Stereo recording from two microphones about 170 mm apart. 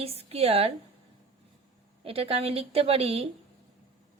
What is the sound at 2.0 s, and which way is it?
A woman's voice, 35° right (ahead or behind).